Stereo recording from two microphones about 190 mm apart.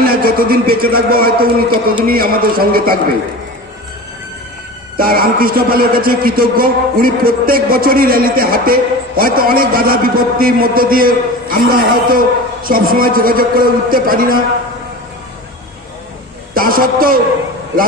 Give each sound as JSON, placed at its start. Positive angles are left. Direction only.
{"t": 0.0, "sound": "a man's voice", "side_deg": -50}
{"t": 4.9, "sound": "a man's voice", "side_deg": -50}
{"t": 16.5, "sound": "a man's voice", "side_deg": -50}